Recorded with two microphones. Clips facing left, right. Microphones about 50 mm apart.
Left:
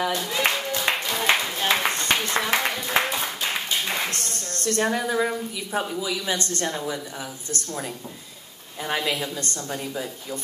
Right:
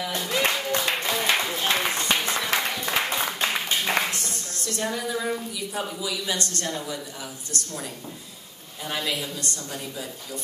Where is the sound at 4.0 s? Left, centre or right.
Right.